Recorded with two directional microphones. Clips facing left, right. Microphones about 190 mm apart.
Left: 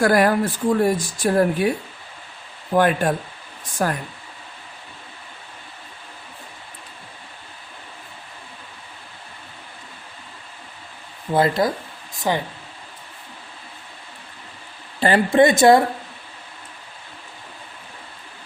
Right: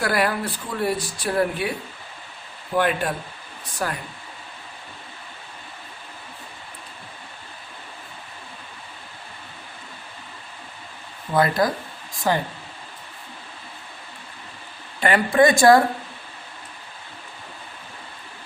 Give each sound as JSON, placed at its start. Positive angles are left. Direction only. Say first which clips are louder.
{"t": 0.0, "sound": "speech", "louder": "left 6 dB", "side_deg": 45}
{"t": 2.7, "sound": "speech", "louder": "left 4 dB", "side_deg": 45}
{"t": 11.3, "sound": "a woman's voice", "louder": "left 1 dB", "side_deg": 25}
{"t": 15.0, "sound": "a woman's voice", "louder": "left 2 dB", "side_deg": 30}